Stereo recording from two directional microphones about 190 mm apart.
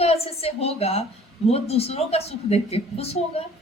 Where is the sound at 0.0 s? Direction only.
30° left (ahead or behind).